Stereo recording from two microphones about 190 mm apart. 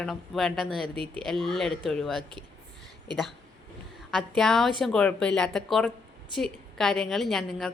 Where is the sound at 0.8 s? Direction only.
25° right (ahead or behind).